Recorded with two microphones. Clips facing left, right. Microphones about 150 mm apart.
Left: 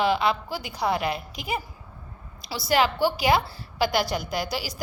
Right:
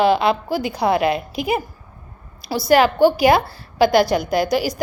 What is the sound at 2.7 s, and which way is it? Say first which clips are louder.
Speech: right 8 dB; 55° right (ahead or behind).